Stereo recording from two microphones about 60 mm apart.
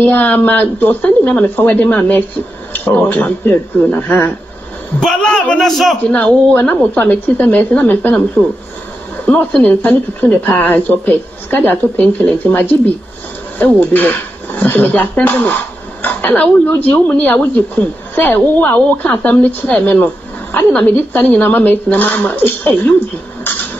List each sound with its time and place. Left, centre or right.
0.0 s a woman's voice: left
5.2 s a man's voice: centre
5.6 s a man's voice: centre
6.1 s a woman's voice: left
8.4 s a man's voice: centre
9.1 s a woman's voice: left